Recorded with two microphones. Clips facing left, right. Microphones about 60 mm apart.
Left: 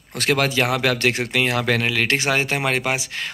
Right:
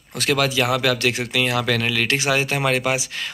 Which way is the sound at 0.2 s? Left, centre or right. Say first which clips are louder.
Even; left.